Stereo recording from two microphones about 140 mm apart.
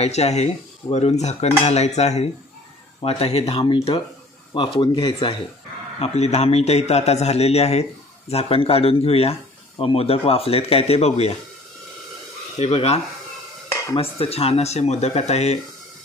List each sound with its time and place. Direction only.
0.0 s speech: 50° left (ahead or behind); by 5.3 s 35° left (ahead or behind)
5.9 s speech: 50° left (ahead or behind)
12.5 s speech: 50° left (ahead or behind)